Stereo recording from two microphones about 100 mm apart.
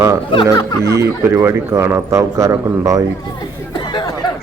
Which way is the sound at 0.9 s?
30° right (ahead or behind).